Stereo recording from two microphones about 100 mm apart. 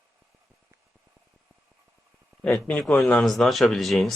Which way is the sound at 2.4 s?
Centre (ahead or behind).